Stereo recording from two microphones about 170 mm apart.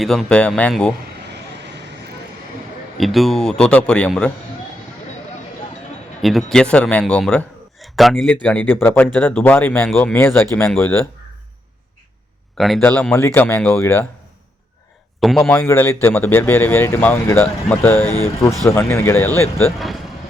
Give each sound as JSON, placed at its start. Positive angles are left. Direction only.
{"t": 0.0, "sound": "speech", "side_deg": 0}
{"t": 1.6, "sound": "vehicle", "side_deg": -85}
{"t": 3.0, "sound": "speech", "side_deg": 0}
{"t": 6.2, "sound": "a man's voice", "side_deg": 0}
{"t": 12.5, "sound": "speech", "side_deg": 0}
{"t": 15.2, "sound": "a man's voice", "side_deg": 0}
{"t": 15.4, "sound": "speech", "side_deg": 15}